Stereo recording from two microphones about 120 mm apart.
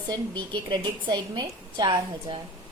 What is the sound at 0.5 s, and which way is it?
A woman's voice, 40° right (ahead or behind).